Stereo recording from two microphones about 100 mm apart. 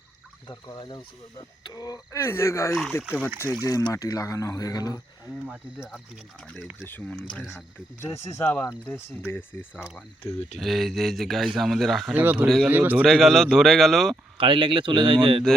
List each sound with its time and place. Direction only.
0.4 s speech: 45° left (ahead or behind)
2.1 s speech: 25° left (ahead or behind)
3.6 s speech: 35° left (ahead or behind)
5.5 s speech: 10° right (ahead or behind)
6.8 s speech: 20° left (ahead or behind)
8.0 s speech: 30° left (ahead or behind)
8.4 s speech: 15° left (ahead or behind)
10.6 s speech: centre (ahead or behind)
12.1 s speech: 15° right (ahead or behind)
13.1 s speech: 5° left (ahead or behind)
14.3 s speech: 55° right (ahead or behind)